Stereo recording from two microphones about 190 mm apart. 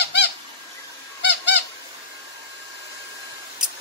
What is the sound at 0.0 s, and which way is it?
Squeak, 60° left (ahead or behind).